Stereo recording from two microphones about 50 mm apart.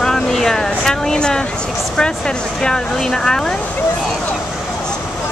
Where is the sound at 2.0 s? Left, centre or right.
Centre.